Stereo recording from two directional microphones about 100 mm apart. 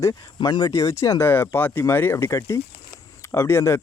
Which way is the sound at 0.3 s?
45° left (ahead or behind).